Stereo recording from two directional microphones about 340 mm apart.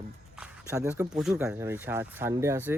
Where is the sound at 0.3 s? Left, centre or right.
Centre.